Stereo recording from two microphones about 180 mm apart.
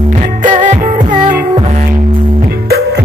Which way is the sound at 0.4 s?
45° right (ahead or behind).